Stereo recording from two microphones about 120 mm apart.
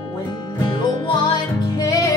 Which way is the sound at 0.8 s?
40° left (ahead or behind).